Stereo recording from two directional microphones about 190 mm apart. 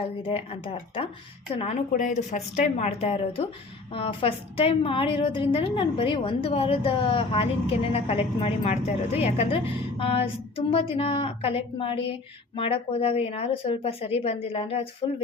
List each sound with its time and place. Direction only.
0.0 s a woman's voice: 30° left (ahead or behind)